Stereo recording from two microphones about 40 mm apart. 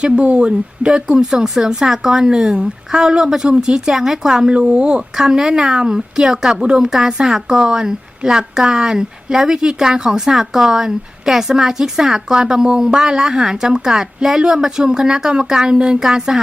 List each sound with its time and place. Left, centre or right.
0.0 s speech: right
0.9 s a woman's voice: centre
5.1 s a woman's voice: centre